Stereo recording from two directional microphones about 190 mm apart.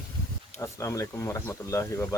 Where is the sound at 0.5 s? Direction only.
15° left (ahead or behind).